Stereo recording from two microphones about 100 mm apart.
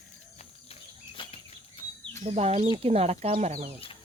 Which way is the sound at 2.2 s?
90° right.